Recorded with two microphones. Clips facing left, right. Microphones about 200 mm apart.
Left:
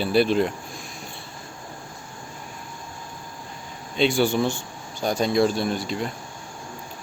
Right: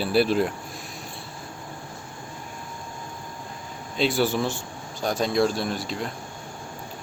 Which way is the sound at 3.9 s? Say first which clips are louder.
Left 2 dB; centre (ahead or behind).